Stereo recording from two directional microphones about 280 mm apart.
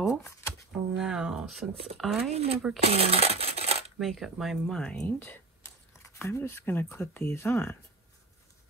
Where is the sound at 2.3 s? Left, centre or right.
Right.